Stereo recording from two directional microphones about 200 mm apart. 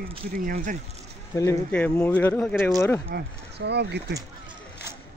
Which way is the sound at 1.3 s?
10° left (ahead or behind).